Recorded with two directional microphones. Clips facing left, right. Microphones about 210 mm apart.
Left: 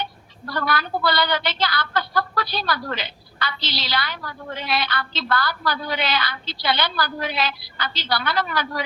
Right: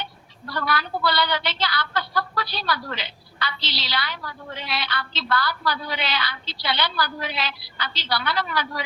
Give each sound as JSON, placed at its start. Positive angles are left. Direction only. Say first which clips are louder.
{"t": 0.0, "sound": "a woman's voice", "louder": "left 4 dB", "side_deg": 45}